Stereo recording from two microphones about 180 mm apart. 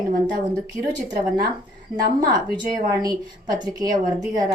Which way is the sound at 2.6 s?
20° right (ahead or behind).